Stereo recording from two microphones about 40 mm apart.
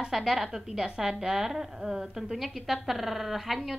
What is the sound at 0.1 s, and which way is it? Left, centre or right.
A woman's voice, centre.